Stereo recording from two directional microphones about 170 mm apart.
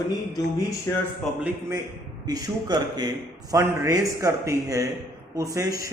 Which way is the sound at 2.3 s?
20° right (ahead or behind).